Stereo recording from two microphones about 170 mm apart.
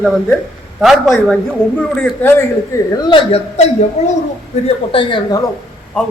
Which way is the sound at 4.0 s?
40° left (ahead or behind).